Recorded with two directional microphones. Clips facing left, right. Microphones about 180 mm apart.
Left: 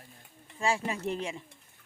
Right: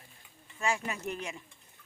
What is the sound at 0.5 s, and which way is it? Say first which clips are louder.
Speech: left 3 dB; 30° left (ahead or behind).